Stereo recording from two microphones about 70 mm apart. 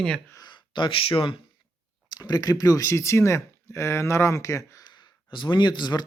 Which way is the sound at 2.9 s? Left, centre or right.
Left.